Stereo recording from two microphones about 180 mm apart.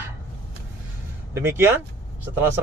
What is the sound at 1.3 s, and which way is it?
Speech, 15° right (ahead or behind).